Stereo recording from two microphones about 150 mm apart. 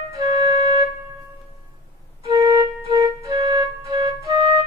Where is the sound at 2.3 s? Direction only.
30° right (ahead or behind).